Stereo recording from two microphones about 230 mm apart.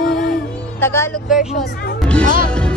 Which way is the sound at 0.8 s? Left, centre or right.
Centre.